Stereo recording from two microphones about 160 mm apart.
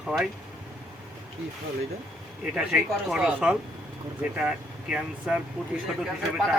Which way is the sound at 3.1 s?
5° right (ahead or behind).